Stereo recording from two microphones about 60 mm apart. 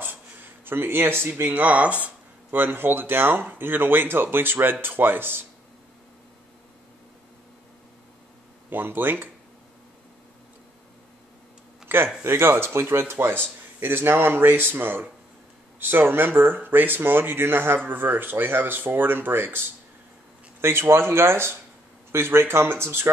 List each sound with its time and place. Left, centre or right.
0.0 s a sound: right
1.3 s speech: right
8.6 s speech: right
12.2 s speech: right
20.6 s speech: right